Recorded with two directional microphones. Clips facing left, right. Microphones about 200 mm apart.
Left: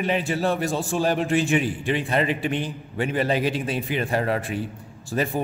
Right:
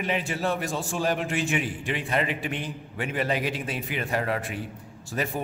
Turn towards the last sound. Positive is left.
turn(degrees=30)  # may be behind; listen again after turning